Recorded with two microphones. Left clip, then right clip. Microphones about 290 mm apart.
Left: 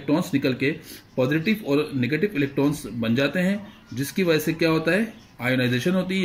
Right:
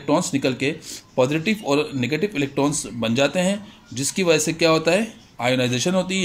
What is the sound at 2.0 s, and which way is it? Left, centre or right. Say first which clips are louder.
Speech: right 1 dB; right.